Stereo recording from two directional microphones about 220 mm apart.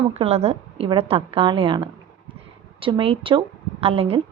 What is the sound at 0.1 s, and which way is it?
A woman's voice, 30° right (ahead or behind).